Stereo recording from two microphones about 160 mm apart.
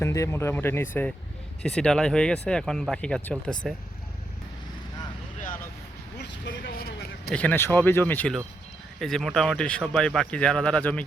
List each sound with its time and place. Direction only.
0.0 s speech: 20° left (ahead or behind)
6.1 s a sound: 80° left
7.3 s speech: 10° left (ahead or behind)